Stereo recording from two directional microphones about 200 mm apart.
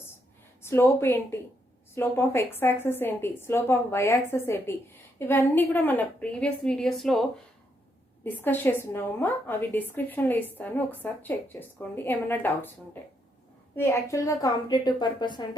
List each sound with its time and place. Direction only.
0.6 s a woman's voice: 15° left (ahead or behind)